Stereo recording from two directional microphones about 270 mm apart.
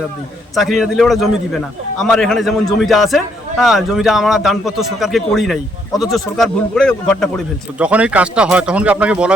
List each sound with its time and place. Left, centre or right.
0.5 s a man's voice: centre